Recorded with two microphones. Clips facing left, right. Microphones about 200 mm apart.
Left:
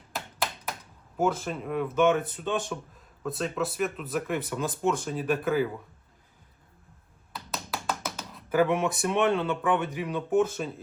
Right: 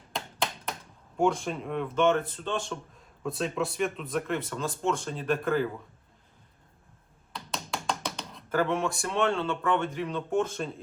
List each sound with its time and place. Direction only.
0.1 s a sound: 5° left (ahead or behind)
2.2 s speech: 15° left (ahead or behind)
3.2 s speech: centre (ahead or behind)
4.4 s speech: 15° left (ahead or behind)
4.9 s speech: 5° left (ahead or behind)
7.3 s tap: 5° left (ahead or behind)
8.5 s speech: 15° left (ahead or behind)